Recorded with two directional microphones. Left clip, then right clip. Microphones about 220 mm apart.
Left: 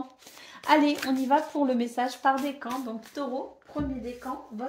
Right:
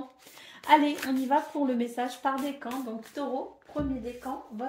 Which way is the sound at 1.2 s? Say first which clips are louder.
Left 2 dB; 35° left (ahead or behind).